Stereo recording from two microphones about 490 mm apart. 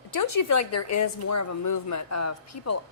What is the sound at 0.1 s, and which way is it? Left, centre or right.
A woman's voice, left.